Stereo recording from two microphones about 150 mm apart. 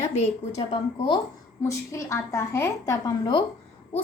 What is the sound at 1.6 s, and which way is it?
A woman's voice, 20° left (ahead or behind).